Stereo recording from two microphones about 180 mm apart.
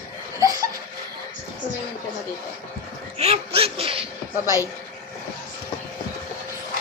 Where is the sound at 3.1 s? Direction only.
35° right (ahead or behind).